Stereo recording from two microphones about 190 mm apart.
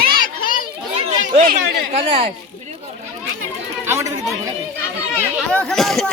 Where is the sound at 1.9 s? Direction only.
30° right (ahead or behind).